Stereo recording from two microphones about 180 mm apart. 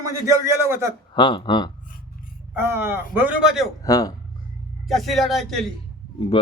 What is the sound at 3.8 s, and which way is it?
Speech, 20° left (ahead or behind).